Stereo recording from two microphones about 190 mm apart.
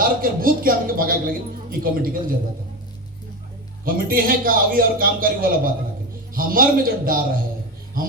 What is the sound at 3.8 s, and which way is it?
A man's voice, 50° right (ahead or behind).